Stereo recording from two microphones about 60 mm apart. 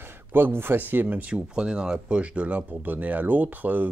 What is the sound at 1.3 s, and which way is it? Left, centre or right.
Speech, centre.